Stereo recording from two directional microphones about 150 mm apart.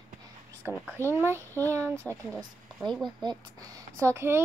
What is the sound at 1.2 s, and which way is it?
Speech, 15° right (ahead or behind).